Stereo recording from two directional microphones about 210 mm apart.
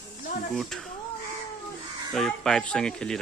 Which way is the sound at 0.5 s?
Centre (ahead or behind).